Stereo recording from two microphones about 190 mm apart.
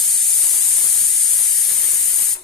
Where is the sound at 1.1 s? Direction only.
Centre (ahead or behind).